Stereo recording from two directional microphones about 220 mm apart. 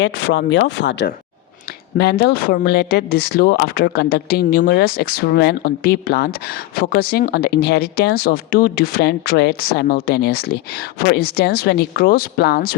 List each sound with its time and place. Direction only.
0.0 s speech: 60° left (ahead or behind); by 12.7 s 45° left (ahead or behind)